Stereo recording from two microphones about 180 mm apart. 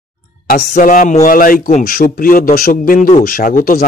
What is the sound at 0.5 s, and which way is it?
A man's voice, 45° left (ahead or behind).